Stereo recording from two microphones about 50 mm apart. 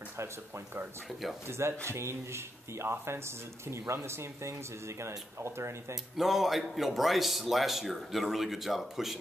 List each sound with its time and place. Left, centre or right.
1.9 s speech: right
6.1 s a man's voice: centre